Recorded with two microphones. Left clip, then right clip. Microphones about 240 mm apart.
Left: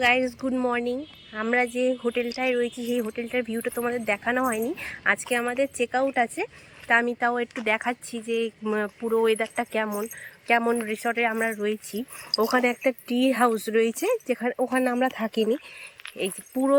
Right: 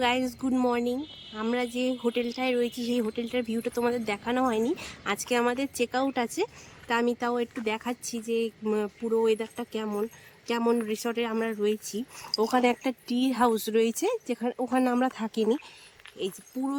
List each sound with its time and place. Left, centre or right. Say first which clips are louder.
0.0 s speech: left 5 dB; centre
11.9 s speech: left 2 dB; left
12.3 s speech: left 2 dB; centre
16.0 s a sound: left 4 dB; left